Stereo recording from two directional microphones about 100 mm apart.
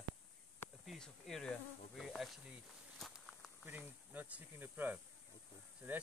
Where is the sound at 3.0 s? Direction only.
5° left (ahead or behind).